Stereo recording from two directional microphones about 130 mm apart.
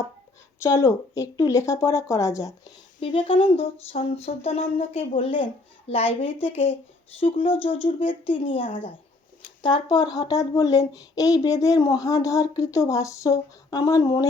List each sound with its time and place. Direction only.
0.6 s speech: 25° left (ahead or behind)
3.0 s a sound: 40° left (ahead or behind)
9.6 s speech: 35° left (ahead or behind)